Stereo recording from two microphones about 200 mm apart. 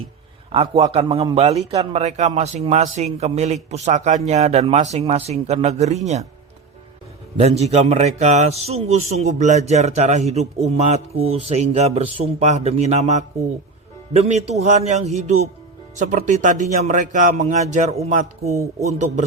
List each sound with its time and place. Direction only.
0.5 s a man's voice: 30° right (ahead or behind)
7.3 s a man's voice: 30° right (ahead or behind)
18.5 s speech: 15° right (ahead or behind)
18.9 s a man's voice: 35° right (ahead or behind)